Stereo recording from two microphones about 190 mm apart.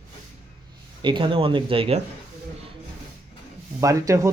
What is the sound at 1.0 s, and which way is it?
Speech, 25° right (ahead or behind).